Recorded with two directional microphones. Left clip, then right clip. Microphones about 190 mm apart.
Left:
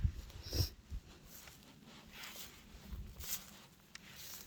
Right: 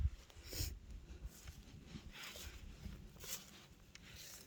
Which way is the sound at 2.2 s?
30° left (ahead or behind).